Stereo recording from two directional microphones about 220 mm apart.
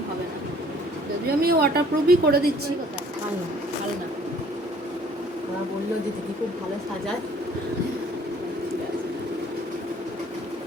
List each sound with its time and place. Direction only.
1.4 s speech: 45° right (ahead or behind)